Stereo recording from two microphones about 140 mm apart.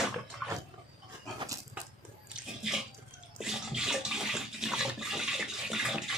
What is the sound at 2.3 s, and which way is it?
Bathtub, 5° right (ahead or behind).